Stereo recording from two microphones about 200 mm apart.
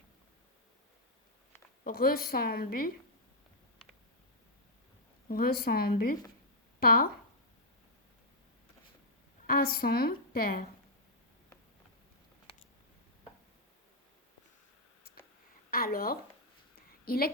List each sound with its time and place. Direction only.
1.8 s a woman's voice: 45° left (ahead or behind)
5.3 s a woman's voice: 50° left (ahead or behind)
9.5 s a woman's voice: 50° left (ahead or behind)
15.7 s a woman's voice: 45° left (ahead or behind)